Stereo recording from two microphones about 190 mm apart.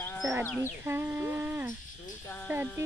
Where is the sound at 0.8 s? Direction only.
10° right (ahead or behind).